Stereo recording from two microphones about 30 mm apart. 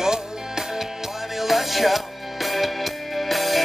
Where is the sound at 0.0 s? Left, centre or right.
Centre.